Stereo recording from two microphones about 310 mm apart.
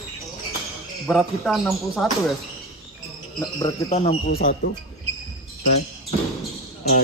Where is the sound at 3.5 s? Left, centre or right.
Centre.